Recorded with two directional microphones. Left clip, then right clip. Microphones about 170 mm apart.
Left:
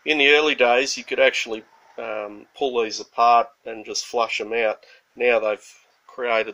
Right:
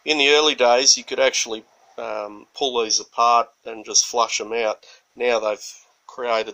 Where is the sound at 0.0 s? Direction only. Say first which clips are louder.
Even; 25° right (ahead or behind).